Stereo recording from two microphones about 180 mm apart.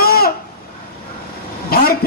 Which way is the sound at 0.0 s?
55° left (ahead or behind).